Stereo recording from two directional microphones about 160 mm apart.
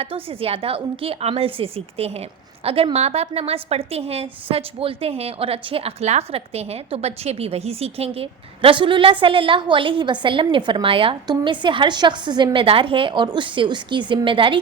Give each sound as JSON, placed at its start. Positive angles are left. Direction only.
{"t": 0.0, "sound": "a woman's voice", "side_deg": -35}